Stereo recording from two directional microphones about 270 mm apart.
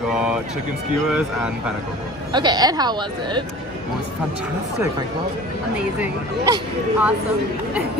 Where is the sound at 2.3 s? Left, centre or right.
Centre.